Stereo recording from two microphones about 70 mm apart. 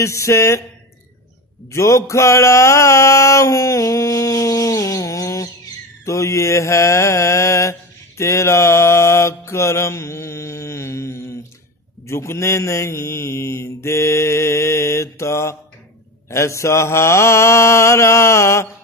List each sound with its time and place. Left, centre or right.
0.0 s mantra: left
1.7 s mantra: left